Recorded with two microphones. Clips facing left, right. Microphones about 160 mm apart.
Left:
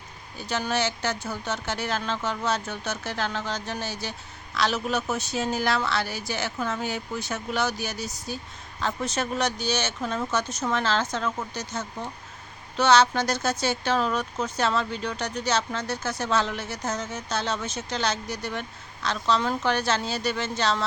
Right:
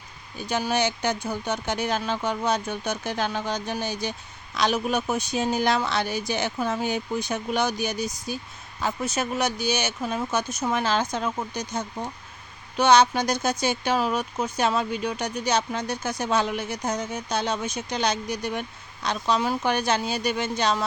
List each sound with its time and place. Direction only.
0.3 s speech: 15° right (ahead or behind)